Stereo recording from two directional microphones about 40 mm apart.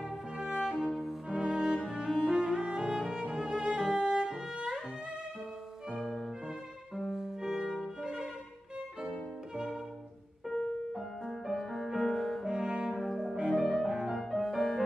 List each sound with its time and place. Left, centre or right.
0.7 s music: centre
1.9 s cello: centre
3.3 s music: centre
4.3 s music: centre
7.0 s music: centre
10.5 s music: centre
12.4 s brass instrument: right
12.9 s brass instrument: centre
13.5 s music: centre
14.1 s music: centre